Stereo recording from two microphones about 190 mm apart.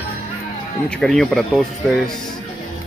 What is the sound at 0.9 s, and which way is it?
Speech, centre (ahead or behind).